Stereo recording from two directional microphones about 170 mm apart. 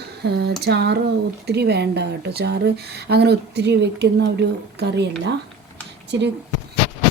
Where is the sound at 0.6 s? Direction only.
75° right (ahead or behind).